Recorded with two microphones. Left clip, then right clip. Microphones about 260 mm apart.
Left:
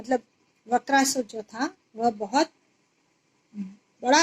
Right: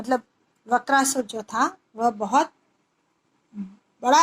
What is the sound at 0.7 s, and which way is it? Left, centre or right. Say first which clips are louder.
Speech: right 2 dB; centre.